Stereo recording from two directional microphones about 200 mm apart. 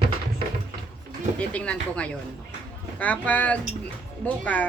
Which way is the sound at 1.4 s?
5° left (ahead or behind).